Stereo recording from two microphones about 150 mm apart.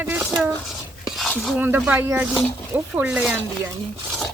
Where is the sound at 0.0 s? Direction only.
10° right (ahead or behind).